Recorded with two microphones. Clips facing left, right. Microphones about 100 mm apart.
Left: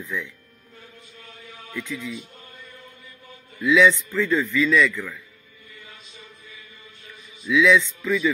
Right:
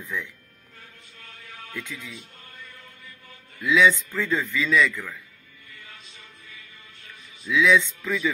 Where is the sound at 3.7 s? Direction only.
15° right (ahead or behind).